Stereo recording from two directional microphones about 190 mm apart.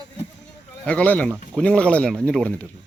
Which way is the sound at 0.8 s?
10° left (ahead or behind).